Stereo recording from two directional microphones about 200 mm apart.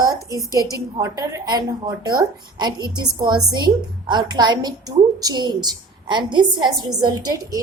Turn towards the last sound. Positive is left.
turn(degrees=-20)  # may be behind; listen again after turning